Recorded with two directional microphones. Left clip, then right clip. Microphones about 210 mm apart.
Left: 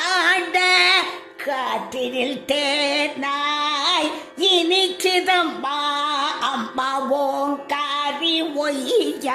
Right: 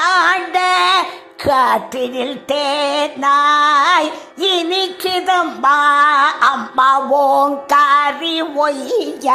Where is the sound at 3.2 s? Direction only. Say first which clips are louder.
Right 10 dB; 25° right (ahead or behind).